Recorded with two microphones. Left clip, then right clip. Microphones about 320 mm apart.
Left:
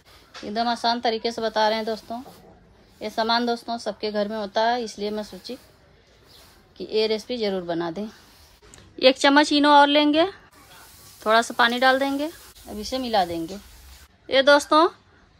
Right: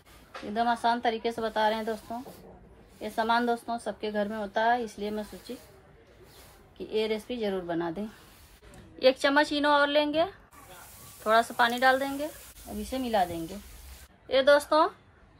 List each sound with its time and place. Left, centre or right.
0.5 s speech: left
6.8 s speech: left